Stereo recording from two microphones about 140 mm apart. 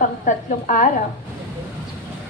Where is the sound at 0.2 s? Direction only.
65° left (ahead or behind).